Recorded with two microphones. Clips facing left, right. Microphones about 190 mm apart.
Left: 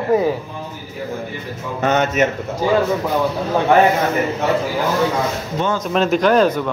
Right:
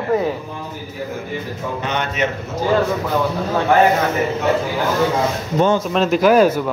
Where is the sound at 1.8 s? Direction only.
45° left (ahead or behind).